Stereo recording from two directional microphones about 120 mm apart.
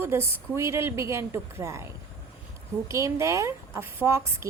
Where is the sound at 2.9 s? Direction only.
25° right (ahead or behind).